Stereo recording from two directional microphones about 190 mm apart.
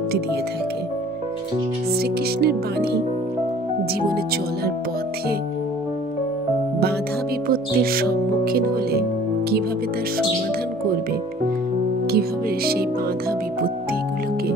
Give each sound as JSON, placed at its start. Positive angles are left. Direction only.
{"t": 2.0, "sound": "speech", "side_deg": -55}
{"t": 7.4, "sound": "speech", "side_deg": -50}
{"t": 12.1, "sound": "speech", "side_deg": -55}